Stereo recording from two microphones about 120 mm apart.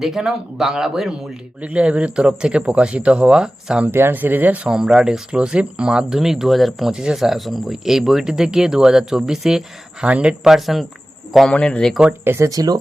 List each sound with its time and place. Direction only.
0.0 s speech: 5° right (ahead or behind)
12.2 s speech: 20° right (ahead or behind)